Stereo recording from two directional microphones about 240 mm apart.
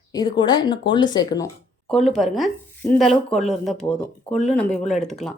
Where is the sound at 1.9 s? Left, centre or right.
Centre.